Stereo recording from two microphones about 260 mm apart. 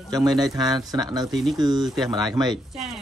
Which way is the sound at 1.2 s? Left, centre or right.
Centre.